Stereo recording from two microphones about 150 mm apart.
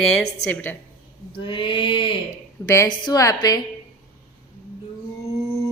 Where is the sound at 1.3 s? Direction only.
35° left (ahead or behind).